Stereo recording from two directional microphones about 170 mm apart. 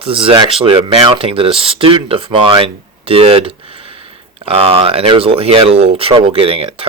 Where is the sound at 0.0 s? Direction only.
30° right (ahead or behind).